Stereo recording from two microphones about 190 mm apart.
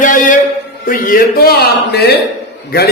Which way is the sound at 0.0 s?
45° left (ahead or behind).